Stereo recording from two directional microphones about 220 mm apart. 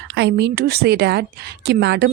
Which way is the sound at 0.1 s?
50° right (ahead or behind).